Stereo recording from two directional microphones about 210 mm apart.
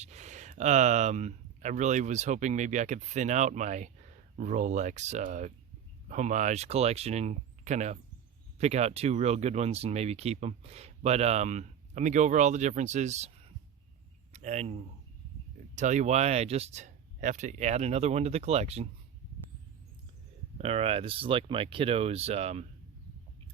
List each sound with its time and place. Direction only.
0.0 s speech: 35° right (ahead or behind)
20.6 s speech: 30° right (ahead or behind)